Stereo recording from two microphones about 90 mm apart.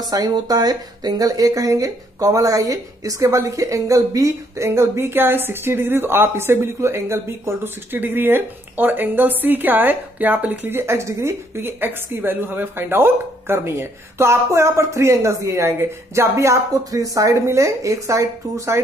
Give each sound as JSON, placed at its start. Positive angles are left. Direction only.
{"t": 0.1, "sound": "speech", "side_deg": -45}